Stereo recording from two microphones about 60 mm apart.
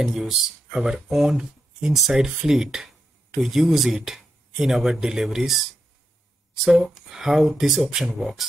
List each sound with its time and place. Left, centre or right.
0.0 s speech: centre
6.6 s speech: centre